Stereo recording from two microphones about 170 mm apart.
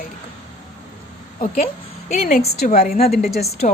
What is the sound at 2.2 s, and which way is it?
Speech, 65° left (ahead or behind).